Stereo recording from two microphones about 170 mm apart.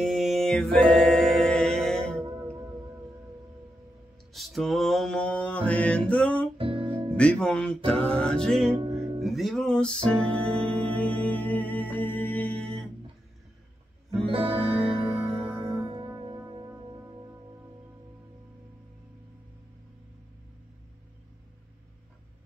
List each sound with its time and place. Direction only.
0.0 s music: centre (ahead or behind)
4.3 s mantra: centre (ahead or behind)
6.6 s music: 30° right (ahead or behind)
7.2 s music: 5° left (ahead or behind)
8.9 s music: 20° right (ahead or behind)
9.2 s music: centre (ahead or behind)
14.2 s music: 35° right (ahead or behind)
15.4 s music: 10° right (ahead or behind)
16.3 s music: 20° right (ahead or behind)